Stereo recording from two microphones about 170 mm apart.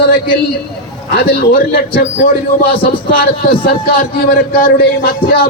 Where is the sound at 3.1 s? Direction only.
60° left (ahead or behind).